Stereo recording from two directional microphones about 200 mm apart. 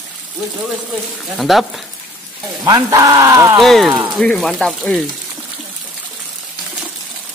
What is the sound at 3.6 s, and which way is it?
Speech, centre (ahead or behind).